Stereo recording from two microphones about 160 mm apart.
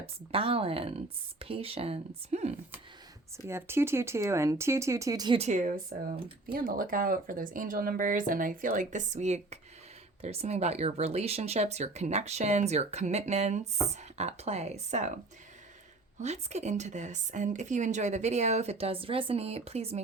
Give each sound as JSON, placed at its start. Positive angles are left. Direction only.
{"t": 0.0, "sound": "speech", "side_deg": -35}
{"t": 3.3, "sound": "speech", "side_deg": -15}
{"t": 5.4, "sound": "speech", "side_deg": -50}
{"t": 16.2, "sound": "speech", "side_deg": -45}